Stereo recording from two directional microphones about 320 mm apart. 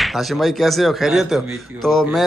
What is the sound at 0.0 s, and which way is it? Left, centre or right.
Speech, centre.